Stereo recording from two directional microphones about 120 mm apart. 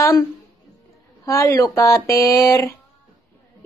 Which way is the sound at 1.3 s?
25° left (ahead or behind).